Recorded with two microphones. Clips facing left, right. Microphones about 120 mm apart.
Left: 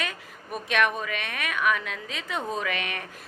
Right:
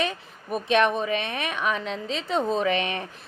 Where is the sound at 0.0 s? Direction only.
25° right (ahead or behind).